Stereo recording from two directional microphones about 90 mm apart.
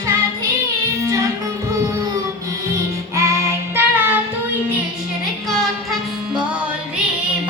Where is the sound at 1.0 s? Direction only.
35° right (ahead or behind).